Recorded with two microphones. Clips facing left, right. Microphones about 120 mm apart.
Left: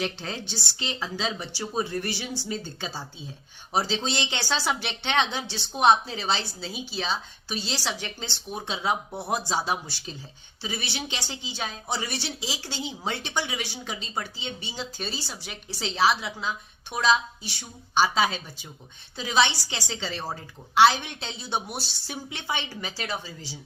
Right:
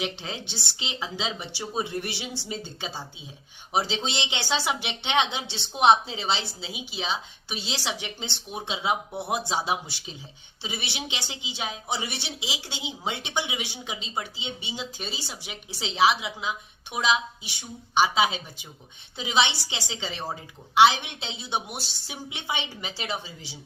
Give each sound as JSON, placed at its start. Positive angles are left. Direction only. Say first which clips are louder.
{"t": 0.0, "sound": "speech", "louder": "left 1 dB", "side_deg": -15}